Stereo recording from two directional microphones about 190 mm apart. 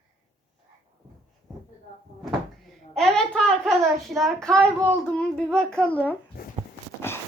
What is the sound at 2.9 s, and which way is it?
Speech, centre (ahead or behind).